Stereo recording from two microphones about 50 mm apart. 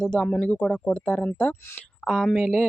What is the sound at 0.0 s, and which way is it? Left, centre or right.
Speech, centre.